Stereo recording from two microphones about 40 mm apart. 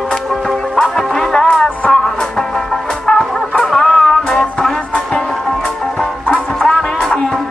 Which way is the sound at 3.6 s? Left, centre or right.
Centre.